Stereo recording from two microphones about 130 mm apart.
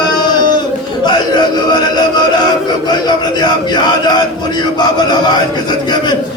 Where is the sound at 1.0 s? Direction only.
35° left (ahead or behind).